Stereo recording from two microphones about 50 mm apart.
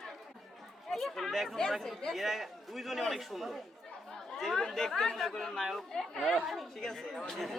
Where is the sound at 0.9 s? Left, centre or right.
Centre.